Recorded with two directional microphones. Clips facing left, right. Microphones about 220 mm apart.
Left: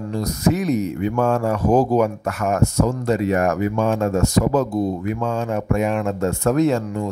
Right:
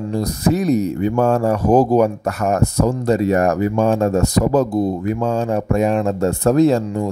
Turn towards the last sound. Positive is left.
turn(degrees=-30)  # may be behind; listen again after turning